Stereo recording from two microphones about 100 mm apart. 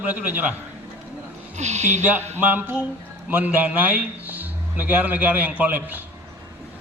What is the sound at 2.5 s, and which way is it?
A man's voice, 15° right (ahead or behind).